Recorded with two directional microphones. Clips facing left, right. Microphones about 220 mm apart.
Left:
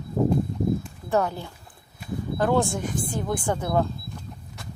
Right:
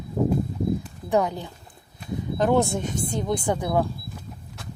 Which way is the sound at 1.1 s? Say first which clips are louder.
Right 1 dB; 15° right (ahead or behind).